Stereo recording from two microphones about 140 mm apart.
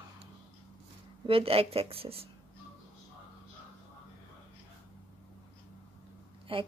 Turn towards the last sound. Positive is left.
turn(degrees=-40)  # may be behind; listen again after turning